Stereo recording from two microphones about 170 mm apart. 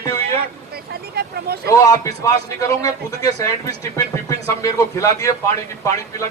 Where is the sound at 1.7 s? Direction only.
20° left (ahead or behind).